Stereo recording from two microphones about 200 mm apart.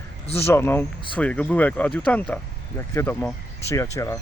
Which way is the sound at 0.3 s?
10° left (ahead or behind).